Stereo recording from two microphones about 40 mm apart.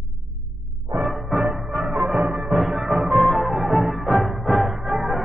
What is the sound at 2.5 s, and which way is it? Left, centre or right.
Music, centre.